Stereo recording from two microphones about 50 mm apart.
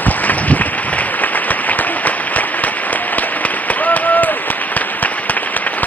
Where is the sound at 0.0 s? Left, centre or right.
Left.